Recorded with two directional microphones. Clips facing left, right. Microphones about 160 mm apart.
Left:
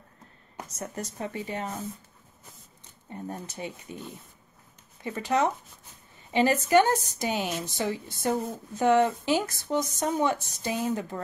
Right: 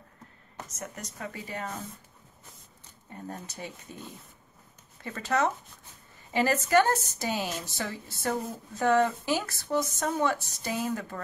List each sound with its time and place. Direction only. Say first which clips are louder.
0.7 s speech: left 6 dB; 30° left (ahead or behind)
3.1 s speech: left 3 dB; 20° left (ahead or behind)
5.0 s speech: left 2 dB; 15° left (ahead or behind)